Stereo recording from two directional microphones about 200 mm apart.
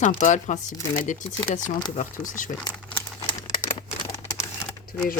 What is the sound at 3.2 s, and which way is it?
Typewriter, 20° left (ahead or behind).